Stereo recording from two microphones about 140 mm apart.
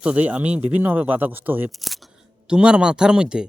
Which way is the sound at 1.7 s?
Centre (ahead or behind).